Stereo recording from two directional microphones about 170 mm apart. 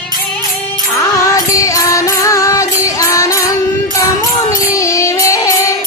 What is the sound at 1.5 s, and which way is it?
Music, 20° left (ahead or behind).